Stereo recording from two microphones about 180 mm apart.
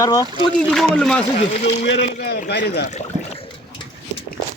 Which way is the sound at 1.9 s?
75° left (ahead or behind).